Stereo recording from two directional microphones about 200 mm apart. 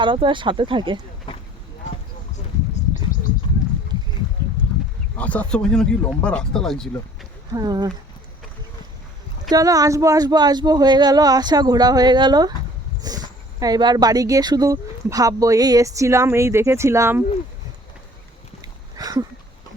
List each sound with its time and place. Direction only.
0.0 s speech: 25° right (ahead or behind)
1.3 s a sound: 25° left (ahead or behind)
5.1 s speech: 5° left (ahead or behind)
7.5 s speech: 20° right (ahead or behind)
9.5 s speech: 20° right (ahead or behind)
18.9 s a sound: 20° right (ahead or behind)